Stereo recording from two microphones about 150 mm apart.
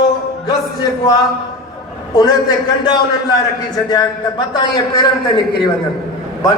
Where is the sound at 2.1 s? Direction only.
25° left (ahead or behind).